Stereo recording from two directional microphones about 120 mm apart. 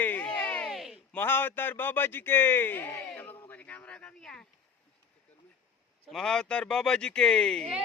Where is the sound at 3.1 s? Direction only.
15° left (ahead or behind).